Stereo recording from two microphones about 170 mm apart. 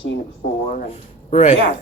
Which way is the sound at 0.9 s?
35° left (ahead or behind).